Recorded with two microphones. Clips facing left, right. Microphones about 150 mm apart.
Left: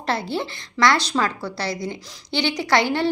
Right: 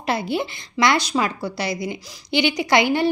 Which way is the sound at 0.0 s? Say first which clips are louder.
Right 2 dB; 15° right (ahead or behind).